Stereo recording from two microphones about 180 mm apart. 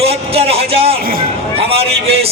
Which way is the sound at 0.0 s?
35° right (ahead or behind).